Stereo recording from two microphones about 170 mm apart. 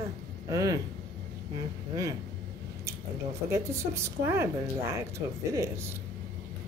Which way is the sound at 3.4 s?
15° right (ahead or behind).